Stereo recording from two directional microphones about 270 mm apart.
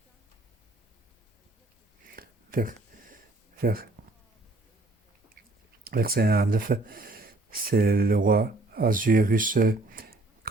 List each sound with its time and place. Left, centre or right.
2.0 s a sound: right
3.6 s speech: right
5.8 s speech: right